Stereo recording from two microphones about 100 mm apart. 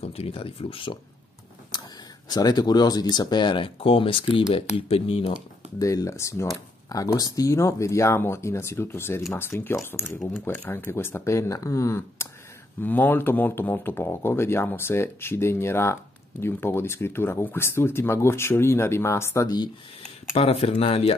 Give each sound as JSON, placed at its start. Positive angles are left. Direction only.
{"t": 0.0, "sound": "speech", "side_deg": 80}
{"t": 1.7, "sound": "a sound", "side_deg": 45}
{"t": 2.2, "sound": "speech", "side_deg": 40}
{"t": 4.7, "sound": "speech", "side_deg": 70}
{"t": 5.8, "sound": "speech", "side_deg": 35}
{"t": 19.4, "sound": "speech", "side_deg": 40}
{"t": 20.0, "sound": "speech", "side_deg": 75}